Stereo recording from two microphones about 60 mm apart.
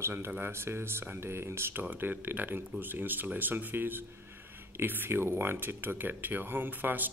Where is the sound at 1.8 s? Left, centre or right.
Right.